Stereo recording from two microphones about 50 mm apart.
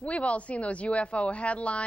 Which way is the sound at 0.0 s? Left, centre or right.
Left.